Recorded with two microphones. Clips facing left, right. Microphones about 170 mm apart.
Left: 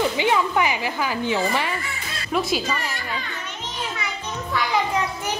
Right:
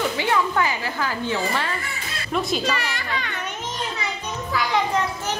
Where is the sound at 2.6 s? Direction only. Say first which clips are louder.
Right 2 dB; 90° right.